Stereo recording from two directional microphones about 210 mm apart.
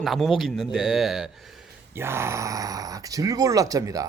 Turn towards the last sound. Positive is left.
turn(degrees=-15)  # may be behind; listen again after turning